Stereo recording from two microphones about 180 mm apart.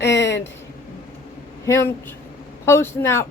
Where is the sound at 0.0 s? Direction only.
75° left (ahead or behind).